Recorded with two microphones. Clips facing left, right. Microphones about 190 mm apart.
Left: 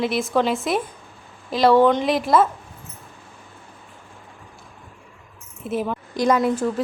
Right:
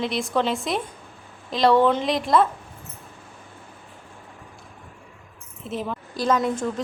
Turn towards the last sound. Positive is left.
turn(degrees=5)  # may be behind; listen again after turning